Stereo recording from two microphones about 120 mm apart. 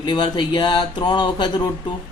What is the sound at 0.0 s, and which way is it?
Speech, 40° left (ahead or behind).